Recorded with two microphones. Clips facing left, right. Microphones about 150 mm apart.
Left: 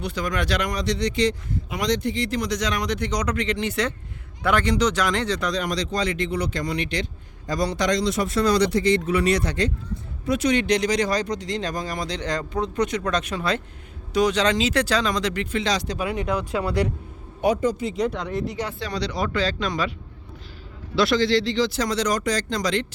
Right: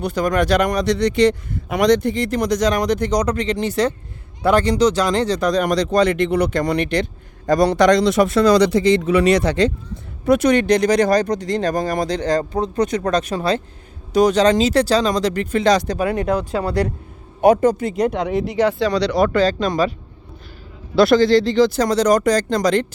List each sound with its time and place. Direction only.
0.0 s a man's voice: 50° right (ahead or behind)
12.2 s speech: 40° right (ahead or behind)
16.4 s speech: 35° right (ahead or behind)
17.4 s speech: 50° right (ahead or behind); by 19.3 s 75° right (ahead or behind)
19.3 s a man's voice: 45° right (ahead or behind)
20.9 s a man's voice: 50° right (ahead or behind)